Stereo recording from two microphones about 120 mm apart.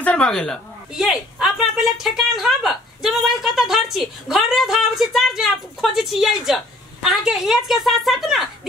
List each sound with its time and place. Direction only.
0.0 s speech: 10° left (ahead or behind)
0.9 s a woman's voice: 5° right (ahead or behind)